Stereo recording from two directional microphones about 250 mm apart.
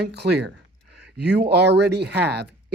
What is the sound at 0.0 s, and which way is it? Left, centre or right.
Speech, right.